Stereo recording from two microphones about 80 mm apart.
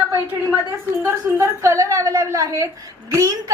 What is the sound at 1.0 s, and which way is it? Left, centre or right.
A woman's voice, right.